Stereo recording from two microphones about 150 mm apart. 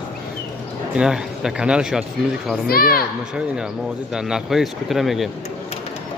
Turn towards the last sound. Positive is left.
turn(degrees=0)  # may be behind; listen again after turning